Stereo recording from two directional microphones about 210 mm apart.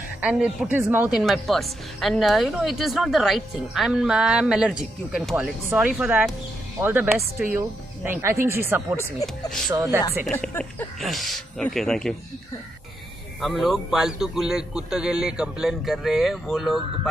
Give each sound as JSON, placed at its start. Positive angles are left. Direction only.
{"t": 0.2, "sound": "a woman's voice", "side_deg": -5}
{"t": 10.2, "sound": "a woman's voice", "side_deg": 5}
{"t": 13.4, "sound": "a woman's voice", "side_deg": 0}